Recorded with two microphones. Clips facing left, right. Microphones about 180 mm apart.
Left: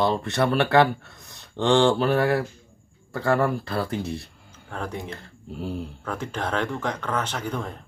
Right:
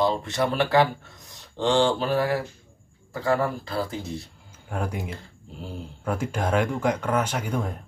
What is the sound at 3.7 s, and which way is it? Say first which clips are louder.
Speech: left 2 dB; 65° left (ahead or behind).